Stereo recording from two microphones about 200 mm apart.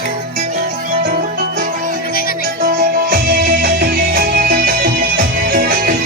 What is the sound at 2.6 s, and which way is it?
Music, 45° right (ahead or behind).